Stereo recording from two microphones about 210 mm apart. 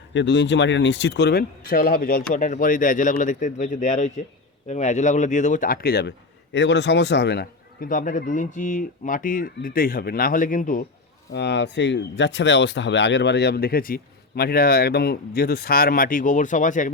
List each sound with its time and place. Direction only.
0.1 s speech: 60° left (ahead or behind); by 10.8 s 40° left (ahead or behind)
11.3 s speech: 55° left (ahead or behind); by 16.9 s 35° left (ahead or behind)